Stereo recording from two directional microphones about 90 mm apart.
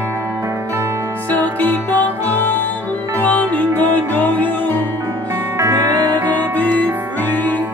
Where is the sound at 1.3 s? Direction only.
20° left (ahead or behind).